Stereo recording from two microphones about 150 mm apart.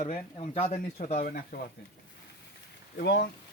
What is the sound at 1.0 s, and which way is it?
Speech, 65° left (ahead or behind).